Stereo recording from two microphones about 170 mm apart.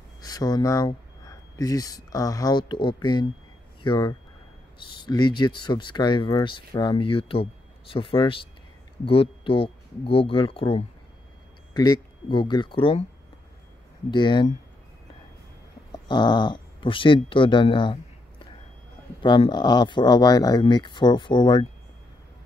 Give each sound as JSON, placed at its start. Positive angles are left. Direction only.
{"t": 0.2, "sound": "speech", "side_deg": 20}
{"t": 14.1, "sound": "speech", "side_deg": 25}
{"t": 16.1, "sound": "speech", "side_deg": 25}
{"t": 19.2, "sound": "speech", "side_deg": 25}